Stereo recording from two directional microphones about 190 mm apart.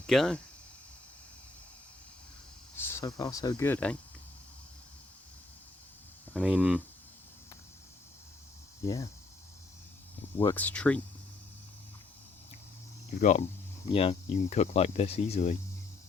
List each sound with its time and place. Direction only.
0.1 s speech: 5° left (ahead or behind)
2.7 s speech: 15° left (ahead or behind)
3.7 s speech: 5° left (ahead or behind)
6.3 s speech: 5° right (ahead or behind)
8.8 s speech: 15° left (ahead or behind)
10.3 s speech: 10° left (ahead or behind)
13.1 s speech: 40° left (ahead or behind)